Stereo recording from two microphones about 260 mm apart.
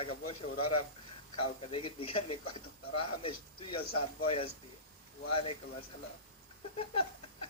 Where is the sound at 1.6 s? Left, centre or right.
Left.